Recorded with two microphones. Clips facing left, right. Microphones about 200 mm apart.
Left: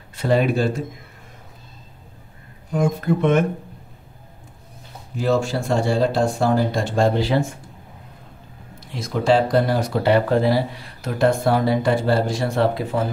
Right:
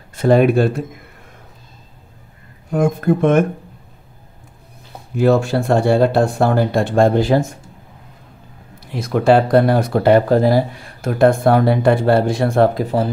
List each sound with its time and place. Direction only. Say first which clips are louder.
0.1 s speech: right 6 dB; 50° right (ahead or behind)
2.7 s speech: right 4 dB; 55° right (ahead or behind)
5.1 s speech: right 6 dB; 60° right (ahead or behind)
8.7 s speech: right 6 dB; 60° right (ahead or behind)